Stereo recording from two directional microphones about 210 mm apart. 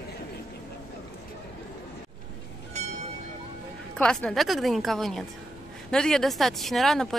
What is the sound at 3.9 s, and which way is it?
Speech, 5° left (ahead or behind).